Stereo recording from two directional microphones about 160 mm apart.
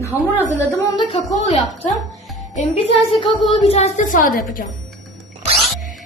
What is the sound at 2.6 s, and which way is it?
Speech, 35° left (ahead or behind).